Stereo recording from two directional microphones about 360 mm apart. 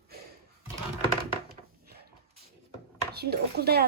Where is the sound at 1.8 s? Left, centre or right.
Right.